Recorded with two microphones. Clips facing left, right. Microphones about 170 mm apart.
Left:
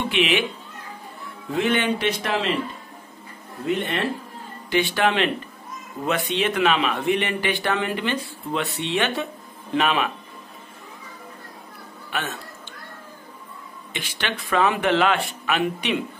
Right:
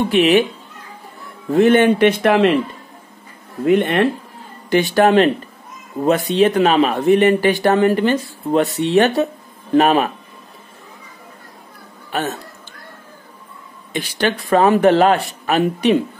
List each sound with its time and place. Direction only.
0.1 s a man's voice: 40° right (ahead or behind)
1.5 s speech: 45° right (ahead or behind)
3.6 s speech: 55° right (ahead or behind)
4.6 s a man's voice: 45° right (ahead or behind)
12.1 s speech: 40° right (ahead or behind)
13.9 s a man's voice: 40° right (ahead or behind)